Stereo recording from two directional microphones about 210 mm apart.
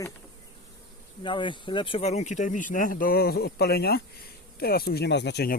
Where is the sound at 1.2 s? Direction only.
25° left (ahead or behind); by 5.6 s 50° left (ahead or behind).